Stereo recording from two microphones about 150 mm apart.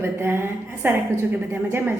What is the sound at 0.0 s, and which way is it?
A woman's voice, 15° right (ahead or behind).